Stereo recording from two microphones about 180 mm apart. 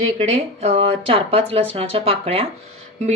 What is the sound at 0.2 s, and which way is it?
A woman's voice, 35° right (ahead or behind).